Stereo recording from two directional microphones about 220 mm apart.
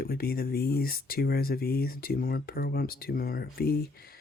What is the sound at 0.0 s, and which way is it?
Speech, 45° left (ahead or behind).